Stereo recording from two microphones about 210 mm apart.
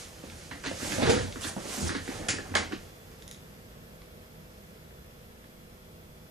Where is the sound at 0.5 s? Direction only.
Centre (ahead or behind).